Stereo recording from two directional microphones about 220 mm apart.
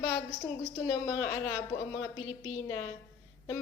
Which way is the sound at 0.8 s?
10° left (ahead or behind).